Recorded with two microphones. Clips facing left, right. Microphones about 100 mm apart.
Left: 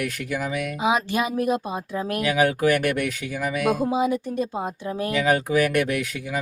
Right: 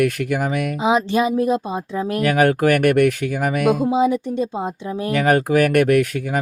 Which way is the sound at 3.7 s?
25° right (ahead or behind).